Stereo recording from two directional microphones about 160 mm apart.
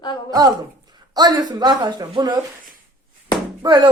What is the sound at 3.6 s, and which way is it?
Speech, 25° right (ahead or behind).